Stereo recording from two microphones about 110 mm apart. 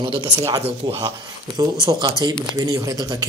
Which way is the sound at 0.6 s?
65° right (ahead or behind).